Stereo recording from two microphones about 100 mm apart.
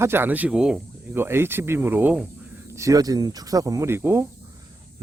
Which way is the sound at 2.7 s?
30° right (ahead or behind).